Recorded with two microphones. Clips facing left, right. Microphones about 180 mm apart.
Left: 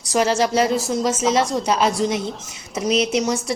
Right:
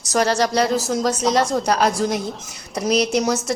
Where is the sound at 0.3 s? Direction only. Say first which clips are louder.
Left 1 dB; 35° right (ahead or behind).